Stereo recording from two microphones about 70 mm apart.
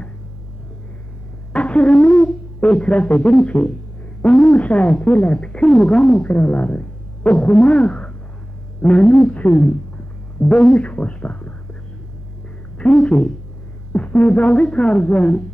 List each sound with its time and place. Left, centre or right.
1.5 s speech: centre
12.7 s a woman's voice: centre